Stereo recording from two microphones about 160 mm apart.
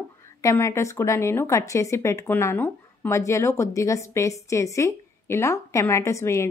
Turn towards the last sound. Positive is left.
turn(degrees=20)  # may be behind; listen again after turning